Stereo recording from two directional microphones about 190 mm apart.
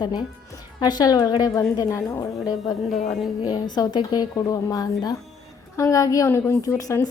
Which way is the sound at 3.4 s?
20° left (ahead or behind).